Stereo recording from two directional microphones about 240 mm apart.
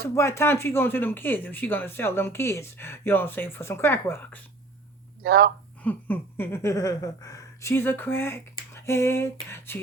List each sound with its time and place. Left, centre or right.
0.0 s speech: centre
5.2 s speech: right
5.8 s speech: centre